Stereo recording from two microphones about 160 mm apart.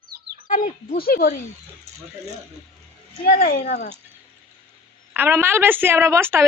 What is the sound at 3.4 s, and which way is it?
Speech, 60° left (ahead or behind).